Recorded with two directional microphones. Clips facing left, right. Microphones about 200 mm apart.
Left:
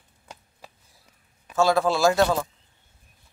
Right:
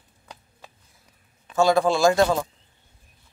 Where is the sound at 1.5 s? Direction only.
Centre (ahead or behind).